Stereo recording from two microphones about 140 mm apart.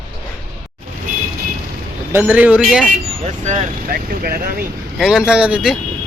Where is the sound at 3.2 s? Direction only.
55° right (ahead or behind); by 4.6 s 90° right.